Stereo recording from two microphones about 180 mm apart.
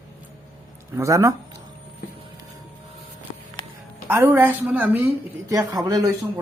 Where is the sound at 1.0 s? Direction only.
15° right (ahead or behind).